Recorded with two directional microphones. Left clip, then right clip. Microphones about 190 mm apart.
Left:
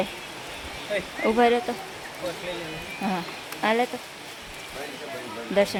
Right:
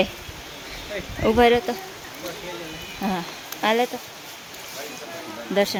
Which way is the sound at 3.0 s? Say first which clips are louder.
Right 2 dB; 10° right (ahead or behind).